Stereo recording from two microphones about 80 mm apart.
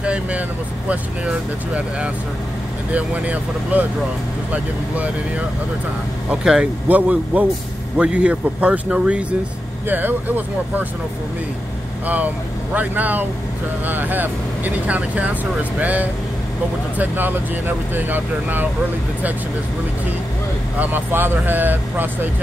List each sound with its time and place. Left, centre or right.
0.0 s vehicle: centre
0.8 s speech: centre
6.4 s speech: centre
12.7 s speech: right
20.8 s speech: right